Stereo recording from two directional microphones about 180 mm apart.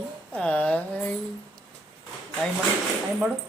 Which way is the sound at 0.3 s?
5° left (ahead or behind).